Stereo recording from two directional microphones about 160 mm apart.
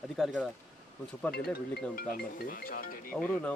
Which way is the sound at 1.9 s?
65° left (ahead or behind).